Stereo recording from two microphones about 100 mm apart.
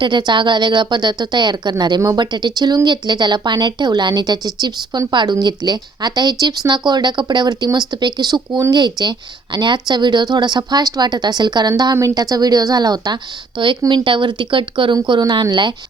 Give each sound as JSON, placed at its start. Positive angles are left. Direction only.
{"t": 0.0, "sound": "a woman's voice", "side_deg": -50}
{"t": 13.6, "sound": "speech", "side_deg": -55}